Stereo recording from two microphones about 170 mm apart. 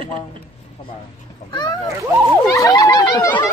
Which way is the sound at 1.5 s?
25° left (ahead or behind).